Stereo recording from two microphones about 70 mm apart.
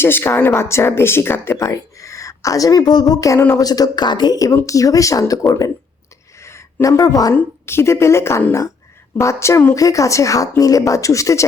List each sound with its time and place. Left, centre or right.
0.0 s speech: left
1.6 s speech: left
3.2 s speech: left
3.6 s speech: left
4.6 s speech: left
6.4 s a sound: left
6.8 s a woman's voice: left
7.6 s speech: left